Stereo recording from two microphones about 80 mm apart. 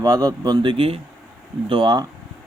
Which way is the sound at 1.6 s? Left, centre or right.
Right.